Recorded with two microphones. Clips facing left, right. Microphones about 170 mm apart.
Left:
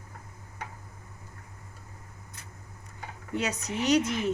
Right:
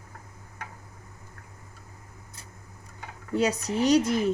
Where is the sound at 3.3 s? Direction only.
35° right (ahead or behind).